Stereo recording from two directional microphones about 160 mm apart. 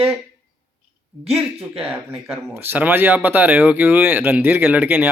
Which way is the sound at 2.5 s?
15° right (ahead or behind).